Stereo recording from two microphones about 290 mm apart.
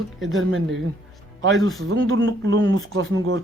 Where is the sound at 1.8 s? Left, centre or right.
Right.